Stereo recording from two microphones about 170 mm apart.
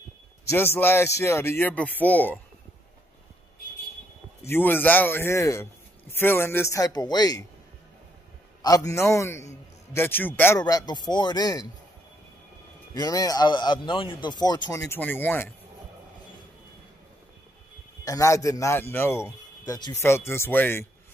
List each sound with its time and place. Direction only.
0.5 s speech: 15° left (ahead or behind)
4.5 s speech: 10° left (ahead or behind)
8.6 s speech: 20° left (ahead or behind)
10.6 s speech: 25° left (ahead or behind)
12.9 s speech: 20° left (ahead or behind)
18.0 s speech: 20° left (ahead or behind)